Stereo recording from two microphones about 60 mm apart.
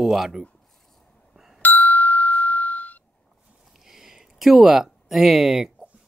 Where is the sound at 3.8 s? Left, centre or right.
Centre.